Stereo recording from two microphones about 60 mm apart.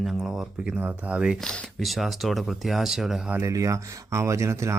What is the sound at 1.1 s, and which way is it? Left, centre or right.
Speech, centre.